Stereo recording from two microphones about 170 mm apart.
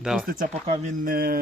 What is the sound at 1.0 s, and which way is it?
Speech, 60° right (ahead or behind).